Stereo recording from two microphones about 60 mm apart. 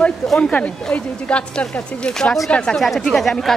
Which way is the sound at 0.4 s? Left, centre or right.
Centre.